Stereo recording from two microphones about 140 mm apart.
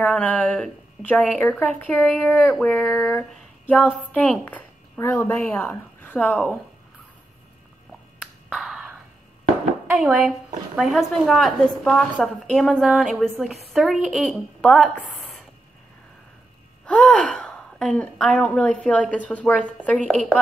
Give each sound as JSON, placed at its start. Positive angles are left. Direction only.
{"t": 0.0, "sound": "speech", "side_deg": 10}
{"t": 8.2, "sound": "a sound", "side_deg": -5}
{"t": 9.9, "sound": "a woman's voice", "side_deg": 0}
{"t": 16.8, "sound": "a woman's voice", "side_deg": 10}